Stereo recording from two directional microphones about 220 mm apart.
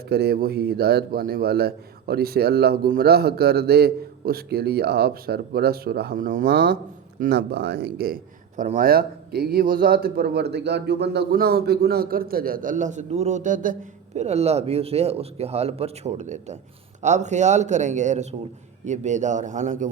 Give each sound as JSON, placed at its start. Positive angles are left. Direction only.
{"t": 0.1, "sound": "a man's voice", "side_deg": -45}